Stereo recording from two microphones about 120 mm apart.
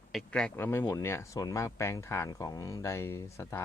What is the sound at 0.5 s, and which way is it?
Speech, 15° left (ahead or behind).